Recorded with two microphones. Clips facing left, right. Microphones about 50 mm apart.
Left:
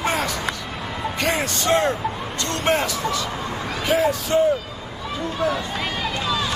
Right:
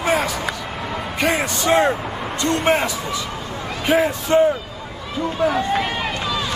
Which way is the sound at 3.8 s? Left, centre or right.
Right.